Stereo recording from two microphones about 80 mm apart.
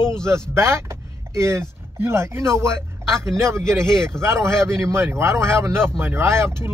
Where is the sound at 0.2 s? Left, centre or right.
Right.